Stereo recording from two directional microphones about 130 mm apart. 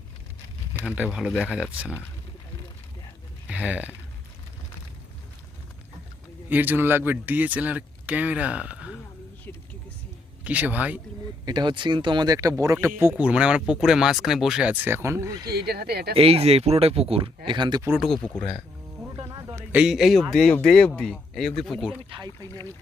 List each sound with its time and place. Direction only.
0.9 s speech: 5° right (ahead or behind)
3.5 s speech: 10° right (ahead or behind)
6.5 s speech: 15° right (ahead or behind)
10.4 s speech: 10° right (ahead or behind)
11.4 s speech: 35° right (ahead or behind)
16.1 s speech: 50° right (ahead or behind)
18.0 s speech: 5° left (ahead or behind)
19.3 s a sound: 35° right (ahead or behind)
19.5 s a man's voice: 10° right (ahead or behind)